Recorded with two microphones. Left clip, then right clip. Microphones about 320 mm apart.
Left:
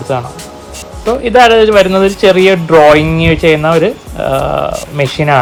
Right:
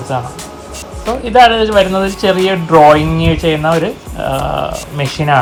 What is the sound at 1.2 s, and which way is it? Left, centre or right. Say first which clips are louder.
Speech: left 2 dB; left.